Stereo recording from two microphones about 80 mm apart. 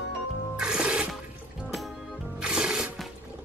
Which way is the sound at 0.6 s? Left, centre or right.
Centre.